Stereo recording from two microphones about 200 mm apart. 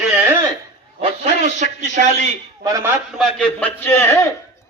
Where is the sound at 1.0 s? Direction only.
35° right (ahead or behind).